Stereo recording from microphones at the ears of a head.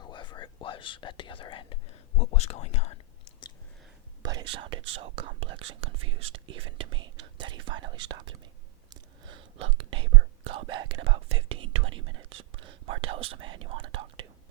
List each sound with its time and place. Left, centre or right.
0.0 s whispering: left
4.2 s speech: right
9.2 s whispering: right